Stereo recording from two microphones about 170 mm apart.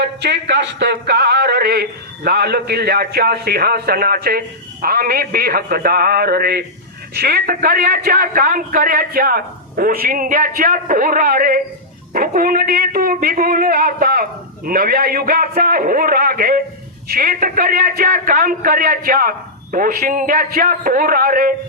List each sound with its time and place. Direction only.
0.0 s speech: 85° right; by 21.5 s 60° right (ahead or behind)